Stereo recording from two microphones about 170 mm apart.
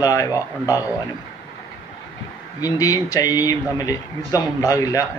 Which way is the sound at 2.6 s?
20° left (ahead or behind).